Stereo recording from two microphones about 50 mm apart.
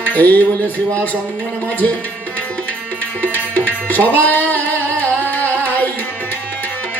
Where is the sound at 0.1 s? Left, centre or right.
Left.